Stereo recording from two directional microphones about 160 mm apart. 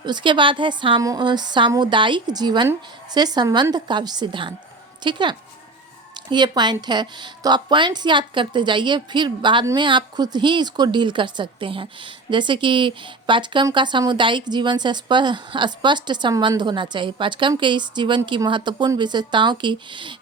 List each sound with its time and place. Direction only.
0.0 s a woman's voice: 30° right (ahead or behind)